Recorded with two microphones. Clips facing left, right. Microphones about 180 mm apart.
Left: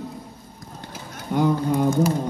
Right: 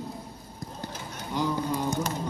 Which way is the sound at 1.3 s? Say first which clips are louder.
Left 8 dB; 55° left (ahead or behind).